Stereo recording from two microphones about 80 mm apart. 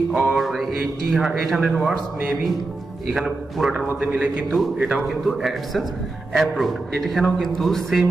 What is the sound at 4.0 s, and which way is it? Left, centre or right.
A man's voice, centre.